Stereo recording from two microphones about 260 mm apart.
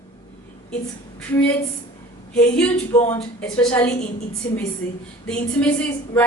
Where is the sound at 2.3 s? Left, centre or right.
Centre.